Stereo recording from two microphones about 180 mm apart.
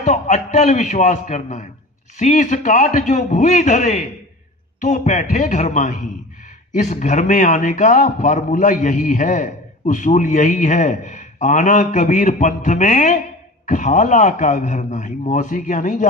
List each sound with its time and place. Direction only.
0.0 s a man's voice: 40° left (ahead or behind)